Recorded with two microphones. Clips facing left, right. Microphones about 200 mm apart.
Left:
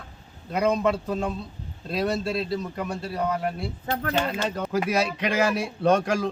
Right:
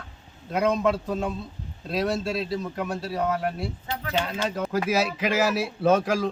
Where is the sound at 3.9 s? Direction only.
50° left (ahead or behind).